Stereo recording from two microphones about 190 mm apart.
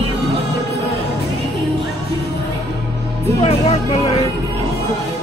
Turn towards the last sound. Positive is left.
turn(degrees=30)  # may be behind; listen again after turning